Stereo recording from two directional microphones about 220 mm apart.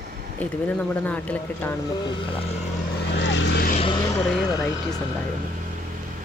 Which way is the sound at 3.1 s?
55° left (ahead or behind).